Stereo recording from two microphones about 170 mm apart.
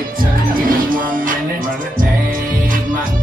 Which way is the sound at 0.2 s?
55° right (ahead or behind).